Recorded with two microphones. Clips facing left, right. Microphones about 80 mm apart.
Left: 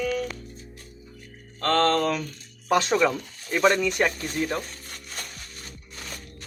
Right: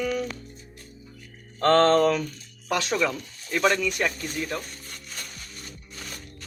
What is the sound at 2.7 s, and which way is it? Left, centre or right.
Speech, left.